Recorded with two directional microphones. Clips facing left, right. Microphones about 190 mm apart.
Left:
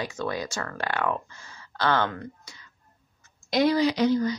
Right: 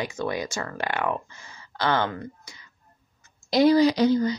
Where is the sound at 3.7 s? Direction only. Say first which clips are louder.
Right 3 dB; 35° right (ahead or behind).